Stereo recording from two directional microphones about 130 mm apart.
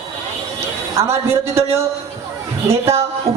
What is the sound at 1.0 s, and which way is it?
Speech, 20° right (ahead or behind).